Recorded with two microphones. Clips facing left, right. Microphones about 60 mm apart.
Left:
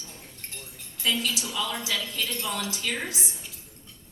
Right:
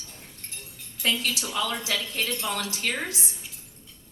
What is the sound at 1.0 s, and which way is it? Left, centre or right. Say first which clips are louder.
A woman's voice: right 1 dB; right.